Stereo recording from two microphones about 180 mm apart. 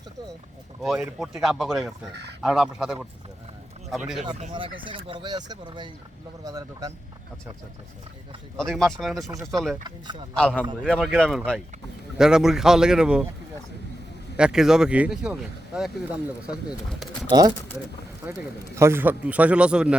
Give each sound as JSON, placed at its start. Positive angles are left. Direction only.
{"t": 0.8, "sound": "speech", "side_deg": -5}
{"t": 4.9, "sound": "speech", "side_deg": -30}
{"t": 8.5, "sound": "speech", "side_deg": 0}
{"t": 9.8, "sound": "speech", "side_deg": -25}
{"t": 10.3, "sound": "a man's voice", "side_deg": 5}
{"t": 14.3, "sound": "speech", "side_deg": -5}
{"t": 18.8, "sound": "a man's voice", "side_deg": -15}